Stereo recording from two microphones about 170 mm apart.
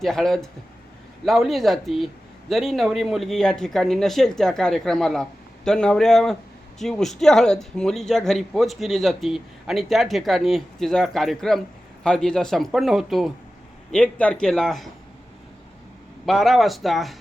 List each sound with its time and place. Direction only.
0.0 s speech: centre (ahead or behind)
16.2 s speech: centre (ahead or behind)